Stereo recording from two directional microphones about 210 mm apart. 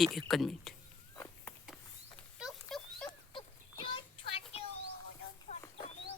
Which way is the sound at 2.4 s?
Centre (ahead or behind).